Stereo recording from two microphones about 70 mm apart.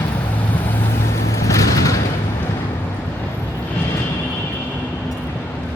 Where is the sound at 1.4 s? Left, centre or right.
Left.